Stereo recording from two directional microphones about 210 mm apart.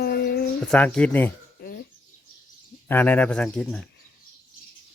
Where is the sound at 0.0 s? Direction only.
50° left (ahead or behind).